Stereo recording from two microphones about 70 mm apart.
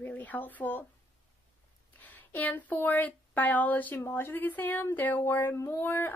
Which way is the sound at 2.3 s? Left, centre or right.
Left.